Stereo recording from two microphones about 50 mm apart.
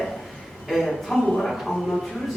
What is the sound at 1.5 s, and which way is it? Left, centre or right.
Speech, centre.